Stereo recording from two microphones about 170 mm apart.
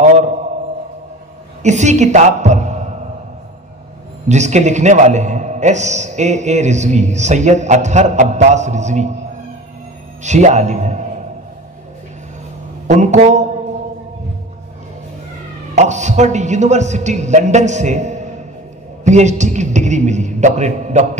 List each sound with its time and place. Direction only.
0.0 s a sound: 45° right (ahead or behind)
1.6 s a woman's voice: 45° right (ahead or behind)
4.3 s a man's voice: 45° right (ahead or behind)
10.2 s a man's voice: 45° right (ahead or behind)
12.8 s a man's voice: 45° right (ahead or behind)
15.7 s a man's voice: 45° right (ahead or behind)